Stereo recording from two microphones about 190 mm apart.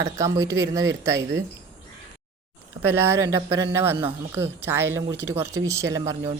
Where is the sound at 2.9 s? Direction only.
15° right (ahead or behind).